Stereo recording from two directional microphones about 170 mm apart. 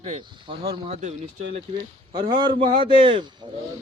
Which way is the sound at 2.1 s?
25° right (ahead or behind).